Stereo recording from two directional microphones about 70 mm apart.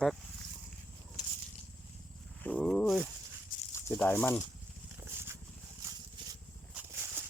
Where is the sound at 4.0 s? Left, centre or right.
Left.